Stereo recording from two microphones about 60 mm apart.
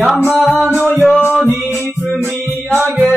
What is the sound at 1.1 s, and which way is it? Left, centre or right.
Music, left.